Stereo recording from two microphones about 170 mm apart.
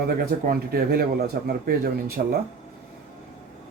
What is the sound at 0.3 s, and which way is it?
A man's voice, 60° right (ahead or behind).